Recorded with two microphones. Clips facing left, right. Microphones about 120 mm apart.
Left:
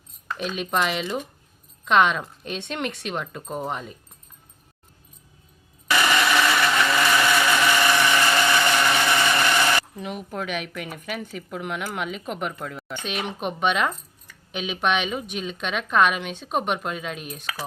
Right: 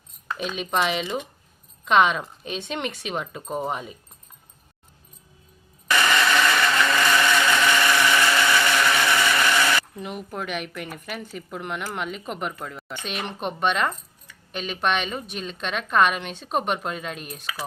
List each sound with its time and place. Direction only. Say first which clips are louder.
0.3 s speech: even; centre (ahead or behind)
5.9 s blender: even; 15° left (ahead or behind)
9.9 s speech: left 1 dB; centre (ahead or behind)